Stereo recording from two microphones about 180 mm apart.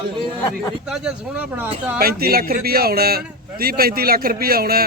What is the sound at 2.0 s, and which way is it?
A man's voice, 55° right (ahead or behind).